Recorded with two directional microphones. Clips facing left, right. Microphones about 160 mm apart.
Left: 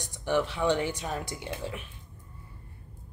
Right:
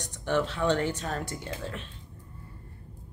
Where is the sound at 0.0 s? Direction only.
10° left (ahead or behind).